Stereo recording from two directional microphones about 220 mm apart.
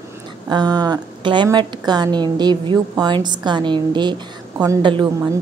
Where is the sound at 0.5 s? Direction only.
20° right (ahead or behind).